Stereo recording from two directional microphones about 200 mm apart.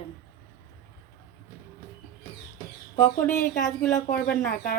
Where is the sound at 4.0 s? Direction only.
40° left (ahead or behind).